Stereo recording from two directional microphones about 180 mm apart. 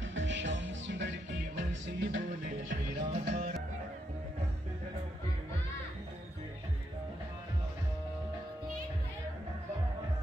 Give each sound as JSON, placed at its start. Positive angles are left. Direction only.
{"t": 0.0, "sound": "music", "side_deg": -90}
{"t": 2.4, "sound": "music", "side_deg": -45}